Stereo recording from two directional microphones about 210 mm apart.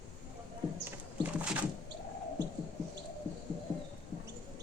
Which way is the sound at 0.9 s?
5° right (ahead or behind).